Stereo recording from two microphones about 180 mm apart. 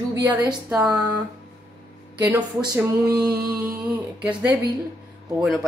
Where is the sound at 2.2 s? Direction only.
10° right (ahead or behind).